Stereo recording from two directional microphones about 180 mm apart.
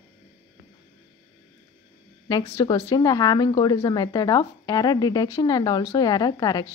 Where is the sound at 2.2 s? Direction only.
20° left (ahead or behind).